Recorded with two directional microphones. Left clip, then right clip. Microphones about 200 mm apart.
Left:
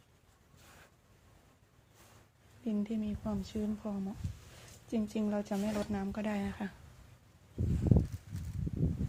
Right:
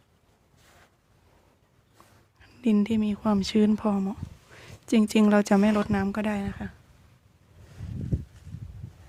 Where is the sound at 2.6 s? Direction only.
45° right (ahead or behind).